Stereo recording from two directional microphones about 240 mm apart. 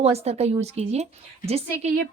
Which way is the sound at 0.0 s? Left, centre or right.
Right.